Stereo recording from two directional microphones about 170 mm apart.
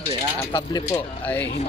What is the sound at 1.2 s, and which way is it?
Speech, 10° left (ahead or behind).